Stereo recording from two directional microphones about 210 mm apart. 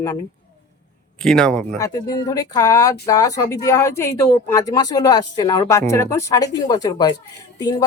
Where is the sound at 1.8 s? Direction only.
15° left (ahead or behind).